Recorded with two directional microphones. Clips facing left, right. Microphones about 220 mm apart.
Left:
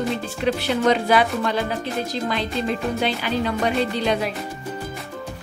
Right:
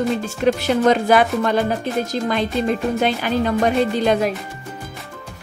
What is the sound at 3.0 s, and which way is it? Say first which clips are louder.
Speech: right 4 dB; 45° right (ahead or behind).